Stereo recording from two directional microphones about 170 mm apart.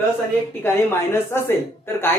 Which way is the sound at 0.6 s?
15° left (ahead or behind).